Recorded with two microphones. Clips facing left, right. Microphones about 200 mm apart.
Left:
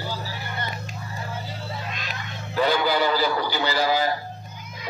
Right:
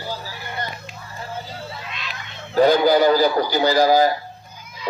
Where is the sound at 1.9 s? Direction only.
45° left (ahead or behind).